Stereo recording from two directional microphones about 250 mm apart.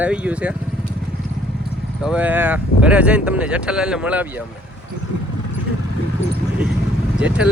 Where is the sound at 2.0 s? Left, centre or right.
Centre.